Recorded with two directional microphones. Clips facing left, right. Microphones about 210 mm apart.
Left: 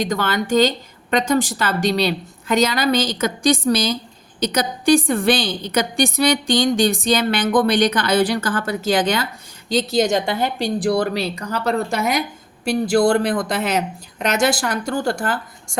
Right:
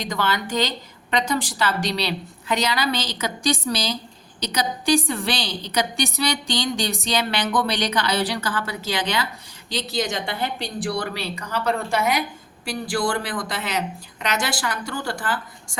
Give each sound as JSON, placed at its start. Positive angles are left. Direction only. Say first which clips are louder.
{"t": 0.0, "sound": "a woman's voice", "louder": "left 4 dB", "side_deg": 50}